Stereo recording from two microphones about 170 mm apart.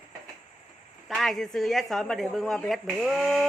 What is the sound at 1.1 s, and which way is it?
A man's voice, centre (ahead or behind).